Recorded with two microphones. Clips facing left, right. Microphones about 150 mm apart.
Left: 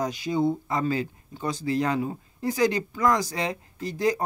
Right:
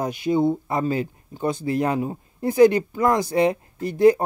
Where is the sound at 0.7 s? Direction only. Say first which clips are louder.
Right 3 dB; 25° right (ahead or behind).